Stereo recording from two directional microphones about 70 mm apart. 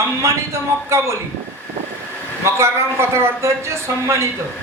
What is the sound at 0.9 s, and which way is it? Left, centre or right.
Speech, right.